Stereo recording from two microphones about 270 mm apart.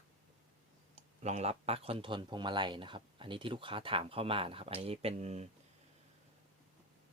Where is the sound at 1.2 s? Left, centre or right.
Right.